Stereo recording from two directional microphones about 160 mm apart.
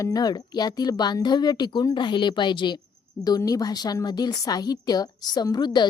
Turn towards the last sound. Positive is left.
turn(degrees=25)  # may be behind; listen again after turning